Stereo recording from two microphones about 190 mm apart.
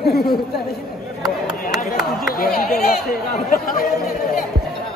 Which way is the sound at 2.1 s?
50° left (ahead or behind).